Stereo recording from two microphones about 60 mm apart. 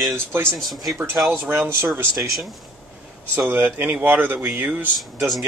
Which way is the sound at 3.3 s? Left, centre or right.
Right.